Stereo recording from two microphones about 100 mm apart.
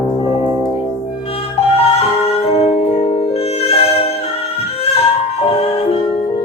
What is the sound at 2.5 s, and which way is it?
Music, 90° left.